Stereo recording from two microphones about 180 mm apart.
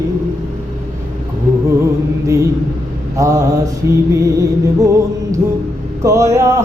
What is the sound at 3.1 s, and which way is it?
Music, 15° right (ahead or behind).